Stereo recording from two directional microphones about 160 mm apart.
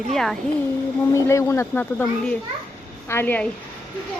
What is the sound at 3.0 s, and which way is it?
Speech, 15° left (ahead or behind).